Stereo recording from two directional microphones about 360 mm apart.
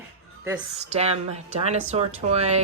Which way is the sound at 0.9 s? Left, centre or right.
Centre.